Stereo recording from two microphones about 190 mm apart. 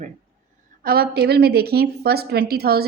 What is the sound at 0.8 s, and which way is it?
A woman's voice, 55° right (ahead or behind).